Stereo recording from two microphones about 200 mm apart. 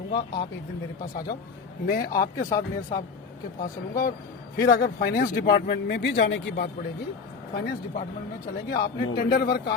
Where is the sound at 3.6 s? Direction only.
45° left (ahead or behind).